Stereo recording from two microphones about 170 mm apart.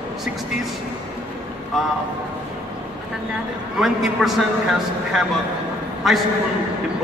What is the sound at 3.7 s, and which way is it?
A man's voice, centre (ahead or behind).